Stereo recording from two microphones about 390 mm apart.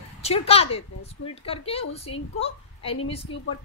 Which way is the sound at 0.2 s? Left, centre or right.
Centre.